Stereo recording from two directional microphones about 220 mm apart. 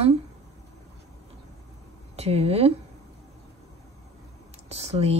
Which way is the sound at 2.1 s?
30° right (ahead or behind).